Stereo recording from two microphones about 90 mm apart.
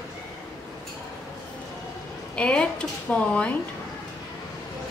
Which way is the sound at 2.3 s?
10° left (ahead or behind).